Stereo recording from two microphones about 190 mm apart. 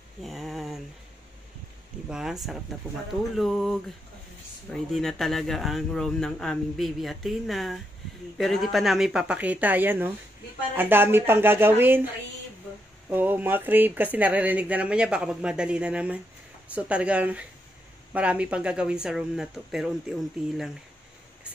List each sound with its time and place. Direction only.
0.2 s a sound: centre (ahead or behind)
2.0 s speech: 5° right (ahead or behind)
3.3 s speech: centre (ahead or behind)
13.1 s speech: 10° right (ahead or behind)